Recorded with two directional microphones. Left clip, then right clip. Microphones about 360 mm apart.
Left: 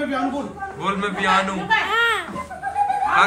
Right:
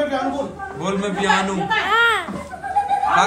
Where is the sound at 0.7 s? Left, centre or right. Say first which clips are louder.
Even; centre.